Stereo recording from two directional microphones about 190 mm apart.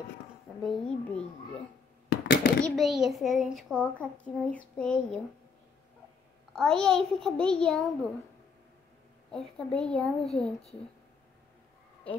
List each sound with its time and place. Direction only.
0.6 s a child's voice: centre (ahead or behind)
2.0 s a sound: 65° left (ahead or behind)
2.6 s a child's voice: centre (ahead or behind)
6.5 s a child's voice: 5° left (ahead or behind)
9.3 s a child's voice: 5° left (ahead or behind)